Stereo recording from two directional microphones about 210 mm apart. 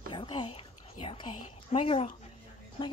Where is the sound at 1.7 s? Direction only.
25° left (ahead or behind).